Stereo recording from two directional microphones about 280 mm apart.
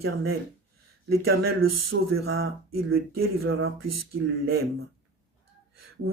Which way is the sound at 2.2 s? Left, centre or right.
Right.